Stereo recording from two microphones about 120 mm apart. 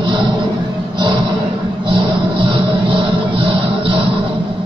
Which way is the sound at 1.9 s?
45° right (ahead or behind).